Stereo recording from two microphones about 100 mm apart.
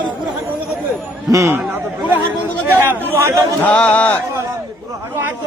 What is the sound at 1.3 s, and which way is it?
Speech, 30° right (ahead or behind).